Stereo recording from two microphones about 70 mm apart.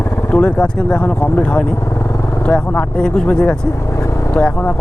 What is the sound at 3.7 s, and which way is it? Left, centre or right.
Vehicle, left.